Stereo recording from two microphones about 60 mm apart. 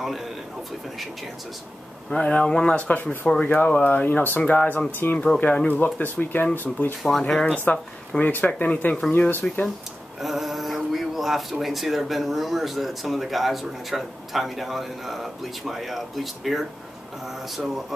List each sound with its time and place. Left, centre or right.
2.1 s speech: centre
2.9 s speech: left
3.5 s speech: centre
3.8 s speech: left
7.0 s speech: centre
8.2 s speech: left
9.3 s speech: left
10.2 s speech: centre